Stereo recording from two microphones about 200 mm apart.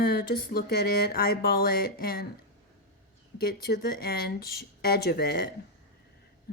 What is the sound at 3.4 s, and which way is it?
Speech, 50° left (ahead or behind).